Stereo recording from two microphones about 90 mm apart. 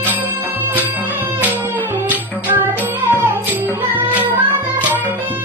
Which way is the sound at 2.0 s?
25° right (ahead or behind).